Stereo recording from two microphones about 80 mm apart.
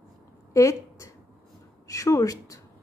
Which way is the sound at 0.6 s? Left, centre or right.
Left.